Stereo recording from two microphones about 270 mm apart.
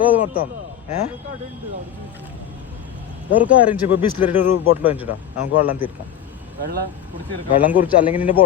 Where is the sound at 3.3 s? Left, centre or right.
Centre.